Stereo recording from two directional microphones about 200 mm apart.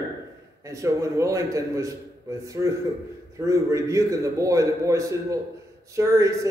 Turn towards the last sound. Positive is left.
turn(degrees=-15)  # may be behind; listen again after turning